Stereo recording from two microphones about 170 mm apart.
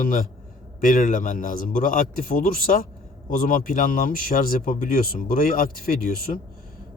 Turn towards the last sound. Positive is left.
turn(degrees=55)  # may be behind; listen again after turning